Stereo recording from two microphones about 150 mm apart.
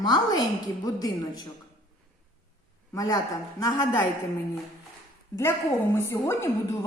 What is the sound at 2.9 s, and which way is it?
A man's voice, 25° left (ahead or behind).